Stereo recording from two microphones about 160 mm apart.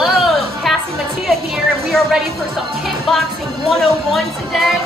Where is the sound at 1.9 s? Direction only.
Centre (ahead or behind).